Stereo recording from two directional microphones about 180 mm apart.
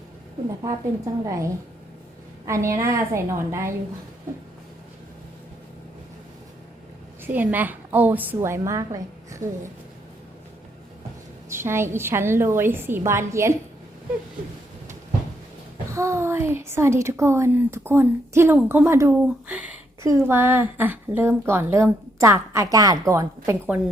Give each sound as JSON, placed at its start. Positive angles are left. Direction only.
{"t": 1.2, "sound": "a woman's voice", "side_deg": -15}
{"t": 2.5, "sound": "a woman's voice", "side_deg": -15}
{"t": 7.3, "sound": "a woman's voice", "side_deg": -10}
{"t": 11.4, "sound": "a woman's voice", "side_deg": -15}
{"t": 15.9, "sound": "a woman's voice", "side_deg": -15}